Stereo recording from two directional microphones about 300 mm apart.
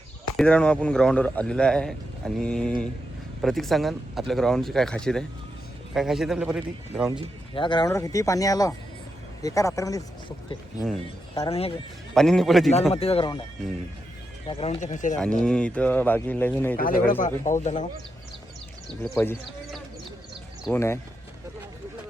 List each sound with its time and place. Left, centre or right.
0.3 s speech: centre
7.5 s speech: centre
12.1 s speech: centre
12.9 s speech: centre
14.4 s speech: centre
15.2 s speech: centre
16.7 s speech: left
19.0 s speech: centre